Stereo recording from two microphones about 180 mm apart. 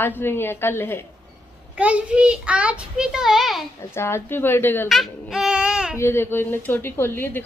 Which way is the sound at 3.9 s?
15° left (ahead or behind).